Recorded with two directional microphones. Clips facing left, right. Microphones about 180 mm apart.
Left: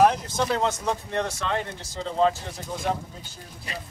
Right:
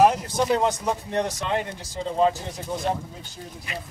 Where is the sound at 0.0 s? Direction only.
10° right (ahead or behind).